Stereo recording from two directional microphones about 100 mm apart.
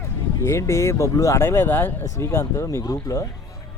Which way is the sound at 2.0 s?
35° left (ahead or behind).